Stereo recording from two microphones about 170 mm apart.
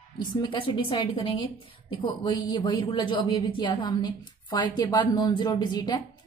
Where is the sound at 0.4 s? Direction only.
30° left (ahead or behind).